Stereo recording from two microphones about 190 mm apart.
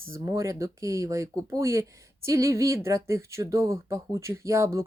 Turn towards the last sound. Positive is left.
turn(degrees=-15)  # may be behind; listen again after turning